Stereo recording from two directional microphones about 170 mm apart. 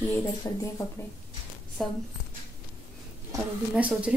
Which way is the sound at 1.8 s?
Centre (ahead or behind).